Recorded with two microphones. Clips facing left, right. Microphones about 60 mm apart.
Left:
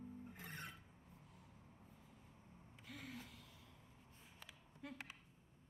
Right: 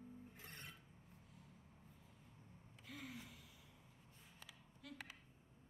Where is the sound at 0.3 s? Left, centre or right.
Left.